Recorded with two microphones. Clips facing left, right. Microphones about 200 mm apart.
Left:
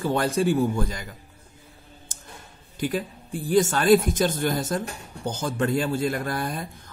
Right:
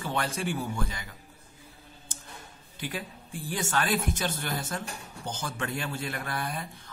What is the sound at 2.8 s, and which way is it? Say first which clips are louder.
A man's voice: left 9 dB; 40° left (ahead or behind).